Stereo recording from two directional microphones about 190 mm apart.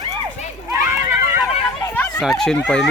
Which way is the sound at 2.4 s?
5° left (ahead or behind).